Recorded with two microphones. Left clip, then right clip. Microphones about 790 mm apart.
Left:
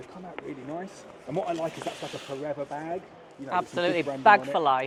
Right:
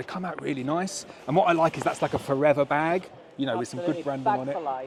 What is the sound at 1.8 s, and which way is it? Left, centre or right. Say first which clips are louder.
Speech: right 9 dB; right.